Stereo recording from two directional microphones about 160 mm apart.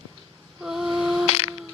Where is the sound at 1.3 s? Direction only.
40° left (ahead or behind).